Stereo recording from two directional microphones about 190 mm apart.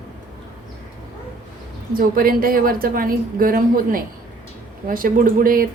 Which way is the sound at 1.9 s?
50° right (ahead or behind).